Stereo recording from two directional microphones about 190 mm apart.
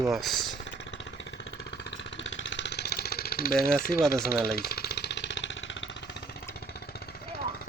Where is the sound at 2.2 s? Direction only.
75° left (ahead or behind); by 4.0 s 50° left (ahead or behind).